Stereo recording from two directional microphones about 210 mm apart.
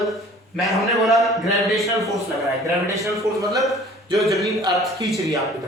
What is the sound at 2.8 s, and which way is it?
Speech, 15° right (ahead or behind).